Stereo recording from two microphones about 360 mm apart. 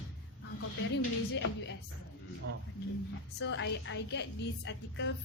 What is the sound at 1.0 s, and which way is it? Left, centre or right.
Speech, left.